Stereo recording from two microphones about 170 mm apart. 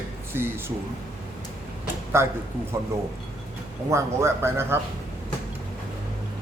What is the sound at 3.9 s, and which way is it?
Speech, 15° right (ahead or behind).